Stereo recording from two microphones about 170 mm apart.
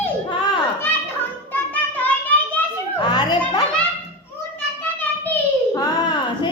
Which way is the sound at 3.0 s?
25° left (ahead or behind).